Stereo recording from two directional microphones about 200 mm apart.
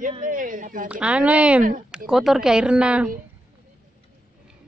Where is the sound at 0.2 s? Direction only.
40° right (ahead or behind).